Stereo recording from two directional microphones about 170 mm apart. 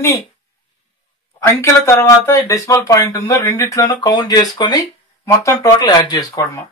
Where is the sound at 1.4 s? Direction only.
15° left (ahead or behind).